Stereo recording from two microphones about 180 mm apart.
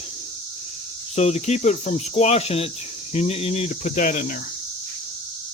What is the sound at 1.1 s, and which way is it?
Speech, 40° left (ahead or behind).